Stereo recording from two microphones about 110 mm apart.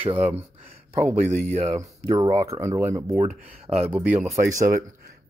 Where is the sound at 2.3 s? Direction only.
65° right (ahead or behind).